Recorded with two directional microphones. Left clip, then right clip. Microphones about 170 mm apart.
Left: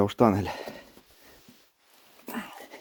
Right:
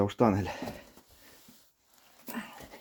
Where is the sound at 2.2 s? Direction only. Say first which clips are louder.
Left 4 dB; 50° left (ahead or behind).